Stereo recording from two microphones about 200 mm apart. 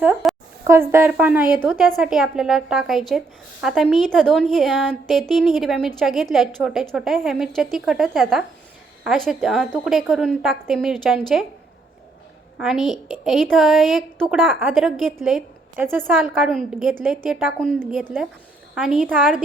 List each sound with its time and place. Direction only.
0.0 s a woman's voice: 5° right (ahead or behind)
1.7 s a woman's voice: centre (ahead or behind)
12.5 s a woman's voice: centre (ahead or behind)